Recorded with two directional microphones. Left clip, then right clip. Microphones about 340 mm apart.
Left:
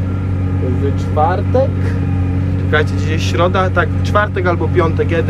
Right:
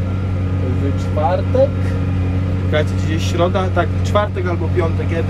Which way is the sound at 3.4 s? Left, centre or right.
Centre.